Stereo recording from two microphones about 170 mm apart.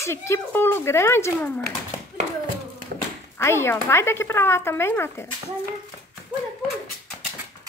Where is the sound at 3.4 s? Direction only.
15° left (ahead or behind).